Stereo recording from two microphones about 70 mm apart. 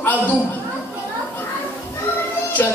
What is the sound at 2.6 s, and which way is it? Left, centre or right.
Speech, left.